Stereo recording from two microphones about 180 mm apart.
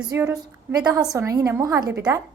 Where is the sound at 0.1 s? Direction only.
15° right (ahead or behind).